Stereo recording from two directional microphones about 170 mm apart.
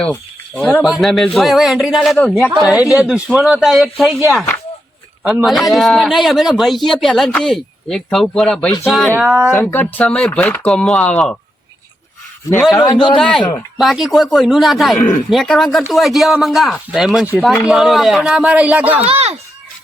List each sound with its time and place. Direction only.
0.0 s a man's voice: 10° left (ahead or behind)
5.2 s a man's voice: 5° right (ahead or behind)
12.8 s a man's voice: 25° left (ahead or behind)
13.1 s a man's voice: 5° left (ahead or behind)
15.0 s speech: 50° left (ahead or behind)
15.3 s a man's voice: centre (ahead or behind)
19.0 s speech: 35° right (ahead or behind)